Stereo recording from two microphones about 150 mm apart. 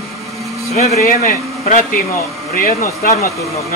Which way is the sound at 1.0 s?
65° left (ahead or behind).